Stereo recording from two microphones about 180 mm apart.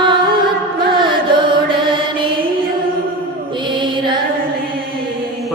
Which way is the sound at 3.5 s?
25° right (ahead or behind).